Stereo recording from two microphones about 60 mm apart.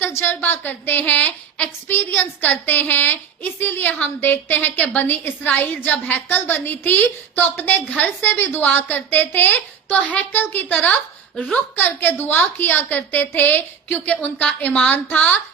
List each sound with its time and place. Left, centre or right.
0.3 s a woman's voice: left